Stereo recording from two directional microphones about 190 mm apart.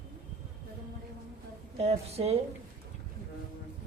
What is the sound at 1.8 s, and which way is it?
Speech, 35° right (ahead or behind).